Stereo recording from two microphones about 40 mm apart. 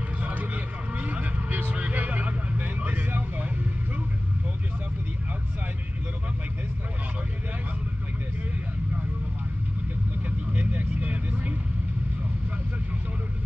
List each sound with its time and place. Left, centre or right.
0.2 s vehicle: right
10.5 s vehicle: right